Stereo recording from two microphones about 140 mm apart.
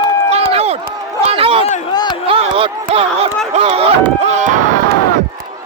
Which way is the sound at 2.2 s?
40° right (ahead or behind).